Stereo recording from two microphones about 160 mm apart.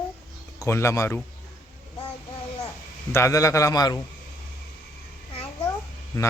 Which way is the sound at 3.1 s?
20° left (ahead or behind).